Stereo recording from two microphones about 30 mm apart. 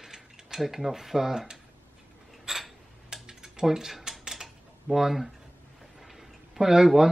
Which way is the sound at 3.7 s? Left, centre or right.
Centre.